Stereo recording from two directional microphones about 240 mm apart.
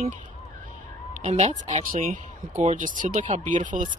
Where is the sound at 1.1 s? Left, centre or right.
Right.